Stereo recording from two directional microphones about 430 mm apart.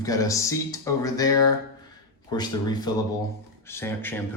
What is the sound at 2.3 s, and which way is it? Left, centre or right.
Speech, centre.